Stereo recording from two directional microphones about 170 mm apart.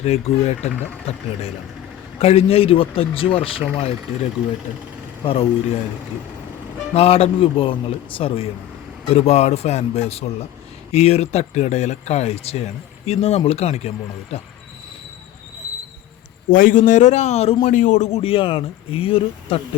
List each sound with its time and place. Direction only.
0.0 s speech: 40° left (ahead or behind)
5.2 s speech: 35° left (ahead or behind)
6.9 s speech: 35° left (ahead or behind)
16.5 s speech: 50° left (ahead or behind); by 19.6 s 35° left (ahead or behind)